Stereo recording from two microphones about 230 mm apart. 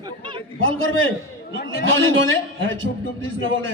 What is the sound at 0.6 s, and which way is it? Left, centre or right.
A man's voice, right.